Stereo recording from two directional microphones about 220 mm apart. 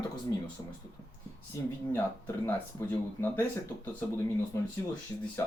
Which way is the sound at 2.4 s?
10° left (ahead or behind).